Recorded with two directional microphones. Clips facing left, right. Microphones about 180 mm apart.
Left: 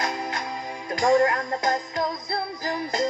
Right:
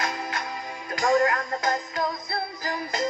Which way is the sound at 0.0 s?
25° left (ahead or behind).